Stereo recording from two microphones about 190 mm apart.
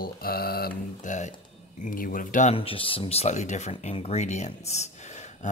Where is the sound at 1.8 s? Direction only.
45° left (ahead or behind).